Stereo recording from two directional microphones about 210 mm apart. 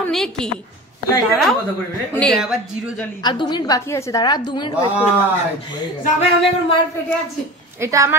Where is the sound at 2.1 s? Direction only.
Centre (ahead or behind).